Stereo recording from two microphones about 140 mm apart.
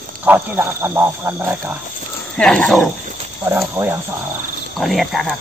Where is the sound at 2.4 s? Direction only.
5° left (ahead or behind).